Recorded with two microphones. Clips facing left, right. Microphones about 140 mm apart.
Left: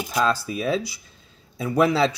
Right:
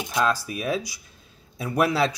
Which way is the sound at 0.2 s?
10° right (ahead or behind).